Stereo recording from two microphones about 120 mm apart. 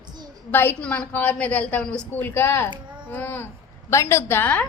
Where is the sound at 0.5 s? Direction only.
15° left (ahead or behind).